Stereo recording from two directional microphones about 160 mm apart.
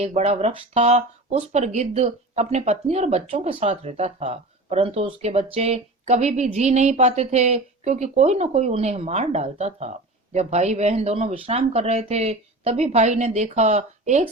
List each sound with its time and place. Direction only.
0.0 s speech: 40° right (ahead or behind)